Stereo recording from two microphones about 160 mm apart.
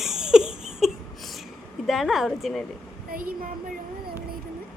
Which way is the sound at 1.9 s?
Centre (ahead or behind).